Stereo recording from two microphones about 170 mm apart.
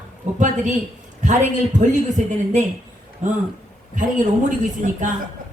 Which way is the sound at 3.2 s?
45° right (ahead or behind).